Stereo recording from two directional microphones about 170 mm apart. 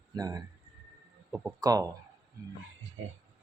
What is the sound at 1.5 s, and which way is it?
Speech, 20° right (ahead or behind).